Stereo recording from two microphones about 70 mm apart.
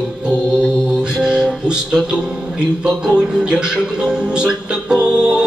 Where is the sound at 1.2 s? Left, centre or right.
Centre.